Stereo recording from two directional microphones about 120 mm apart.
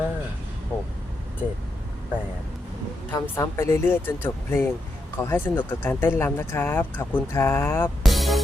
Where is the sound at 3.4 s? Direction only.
20° left (ahead or behind).